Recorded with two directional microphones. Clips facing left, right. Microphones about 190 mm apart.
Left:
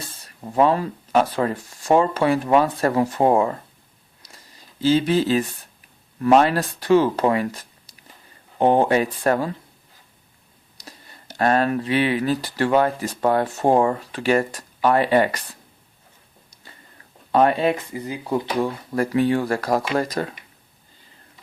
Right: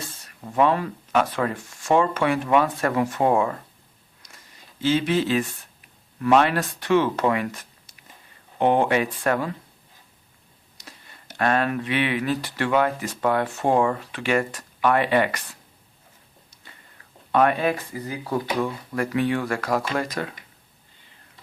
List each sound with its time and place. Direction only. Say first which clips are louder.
0.3 s speech: left 2 dB; 30° left (ahead or behind)
4.2 s a sound: left 2 dB; 35° left (ahead or behind)
6.1 s speech: left 3 dB; 35° left (ahead or behind)
10.8 s speech: left 3 dB; 35° left (ahead or behind)
17.3 s speech: left 2 dB; 30° left (ahead or behind)
18.6 s speech: left 3 dB; 35° left (ahead or behind)